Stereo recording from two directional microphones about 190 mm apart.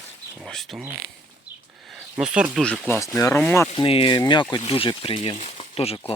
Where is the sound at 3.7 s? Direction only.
30° left (ahead or behind).